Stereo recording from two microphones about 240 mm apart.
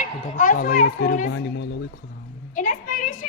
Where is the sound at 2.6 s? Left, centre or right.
Left.